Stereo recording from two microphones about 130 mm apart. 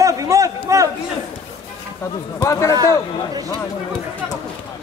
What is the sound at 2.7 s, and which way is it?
Speech, 30° right (ahead or behind).